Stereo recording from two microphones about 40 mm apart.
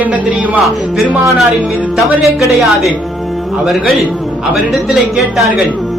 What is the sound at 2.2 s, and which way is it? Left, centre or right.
Speech, centre.